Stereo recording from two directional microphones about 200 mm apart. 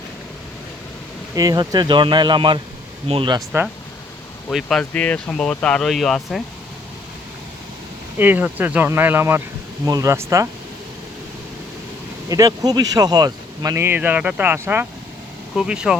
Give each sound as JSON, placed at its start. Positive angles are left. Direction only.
{"t": 1.4, "sound": "speech", "side_deg": -20}
{"t": 4.4, "sound": "speech", "side_deg": 5}
{"t": 8.2, "sound": "speech", "side_deg": -10}
{"t": 12.3, "sound": "speech", "side_deg": -20}